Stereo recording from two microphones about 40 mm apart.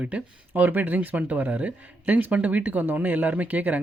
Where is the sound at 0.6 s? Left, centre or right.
Right.